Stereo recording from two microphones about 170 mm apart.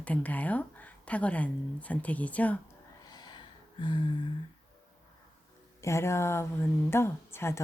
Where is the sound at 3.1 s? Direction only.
25° left (ahead or behind).